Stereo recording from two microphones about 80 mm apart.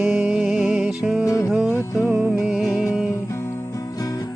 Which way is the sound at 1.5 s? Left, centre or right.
Centre.